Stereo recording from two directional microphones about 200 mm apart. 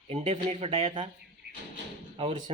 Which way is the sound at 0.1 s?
30° right (ahead or behind).